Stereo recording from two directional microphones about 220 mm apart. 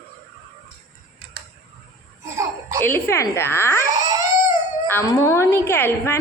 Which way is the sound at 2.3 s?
15° right (ahead or behind).